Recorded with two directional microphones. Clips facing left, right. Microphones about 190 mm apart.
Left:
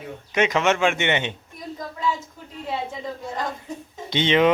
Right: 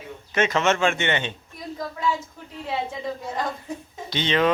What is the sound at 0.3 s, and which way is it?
Speech, 15° left (ahead or behind).